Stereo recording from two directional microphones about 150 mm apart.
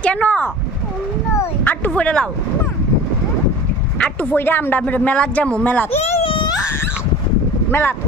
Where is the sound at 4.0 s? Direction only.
10° left (ahead or behind).